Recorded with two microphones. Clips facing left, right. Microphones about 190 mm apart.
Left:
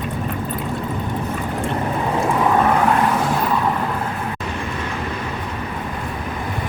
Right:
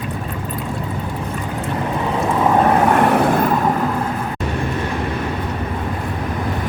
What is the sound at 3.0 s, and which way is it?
Vehicle, 60° right (ahead or behind).